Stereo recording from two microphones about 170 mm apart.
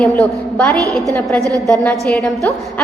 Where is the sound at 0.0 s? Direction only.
10° left (ahead or behind).